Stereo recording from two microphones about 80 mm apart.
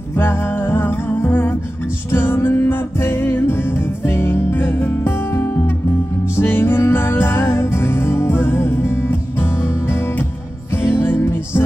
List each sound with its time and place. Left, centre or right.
0.2 s music: left